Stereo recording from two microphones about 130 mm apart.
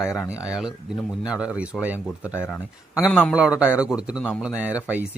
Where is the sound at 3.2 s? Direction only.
5° right (ahead or behind).